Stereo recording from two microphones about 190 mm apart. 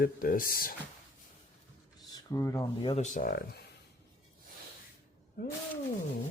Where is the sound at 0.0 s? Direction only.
50° left (ahead or behind).